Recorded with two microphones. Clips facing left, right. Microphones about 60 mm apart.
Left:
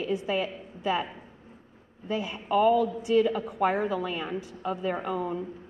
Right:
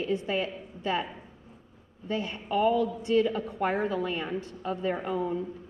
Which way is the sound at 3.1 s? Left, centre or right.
Centre.